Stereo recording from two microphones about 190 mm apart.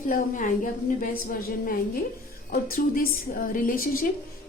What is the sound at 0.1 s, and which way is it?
A woman's voice, 45° left (ahead or behind).